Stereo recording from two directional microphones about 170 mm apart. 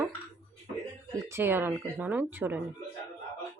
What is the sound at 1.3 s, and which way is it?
A woman's voice, 15° right (ahead or behind).